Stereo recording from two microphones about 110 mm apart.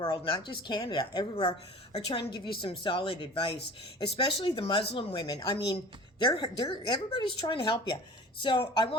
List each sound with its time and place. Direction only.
0.0 s a woman's voice: 50° left (ahead or behind)
1.5 s a woman's voice: 60° left (ahead or behind)
2.0 s a woman's voice: 45° left (ahead or behind)